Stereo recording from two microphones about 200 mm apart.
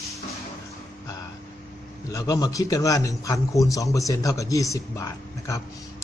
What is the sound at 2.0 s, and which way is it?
A man's voice, 15° left (ahead or behind).